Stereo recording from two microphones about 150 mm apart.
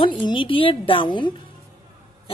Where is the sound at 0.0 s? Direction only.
35° left (ahead or behind).